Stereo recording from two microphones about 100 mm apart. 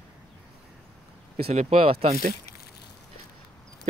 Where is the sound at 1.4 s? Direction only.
80° right.